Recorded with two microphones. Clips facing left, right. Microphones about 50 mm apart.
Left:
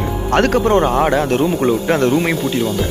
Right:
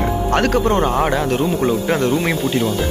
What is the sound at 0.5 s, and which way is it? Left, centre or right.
Speech, centre.